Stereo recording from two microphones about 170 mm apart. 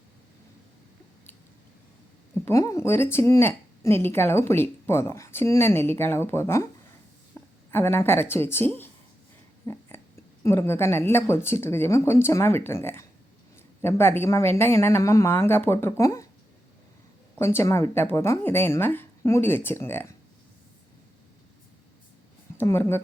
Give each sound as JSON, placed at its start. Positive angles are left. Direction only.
{"t": 2.4, "sound": "a woman's voice", "side_deg": 20}
{"t": 7.3, "sound": "a sound", "side_deg": 15}
{"t": 7.7, "sound": "a woman's voice", "side_deg": 15}
{"t": 17.3, "sound": "a woman's voice", "side_deg": 15}
{"t": 22.5, "sound": "a woman's voice", "side_deg": 15}